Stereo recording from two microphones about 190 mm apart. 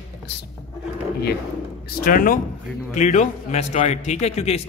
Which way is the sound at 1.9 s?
50° left (ahead or behind).